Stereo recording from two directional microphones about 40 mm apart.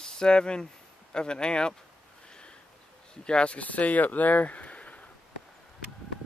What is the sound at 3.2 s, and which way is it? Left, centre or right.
Speech, left.